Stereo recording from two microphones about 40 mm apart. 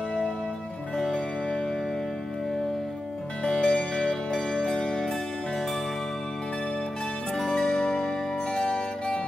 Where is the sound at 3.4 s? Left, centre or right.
Left.